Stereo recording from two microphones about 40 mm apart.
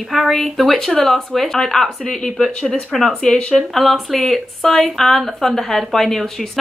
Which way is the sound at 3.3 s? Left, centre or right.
Left.